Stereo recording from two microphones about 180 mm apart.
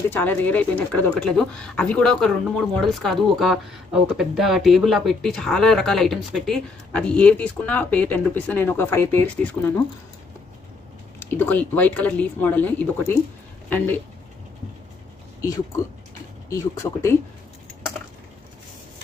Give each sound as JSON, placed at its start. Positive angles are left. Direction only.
{"t": 0.1, "sound": "speech", "side_deg": 10}
{"t": 11.1, "sound": "speech", "side_deg": 10}
{"t": 15.4, "sound": "speech", "side_deg": 20}